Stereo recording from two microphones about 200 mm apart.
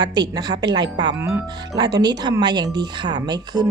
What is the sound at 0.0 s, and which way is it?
Speech, 20° right (ahead or behind).